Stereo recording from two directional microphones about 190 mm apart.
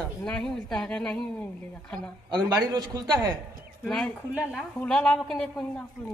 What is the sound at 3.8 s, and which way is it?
A woman's voice, 5° left (ahead or behind).